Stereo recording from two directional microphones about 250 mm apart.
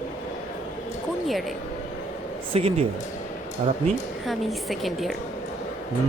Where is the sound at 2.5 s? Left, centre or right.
Right.